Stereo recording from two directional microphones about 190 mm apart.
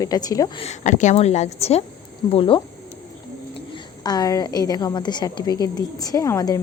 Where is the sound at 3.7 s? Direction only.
20° left (ahead or behind).